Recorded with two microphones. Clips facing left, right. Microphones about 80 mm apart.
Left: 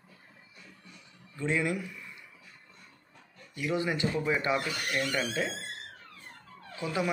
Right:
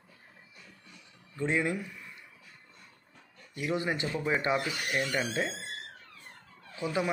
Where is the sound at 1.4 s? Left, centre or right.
Right.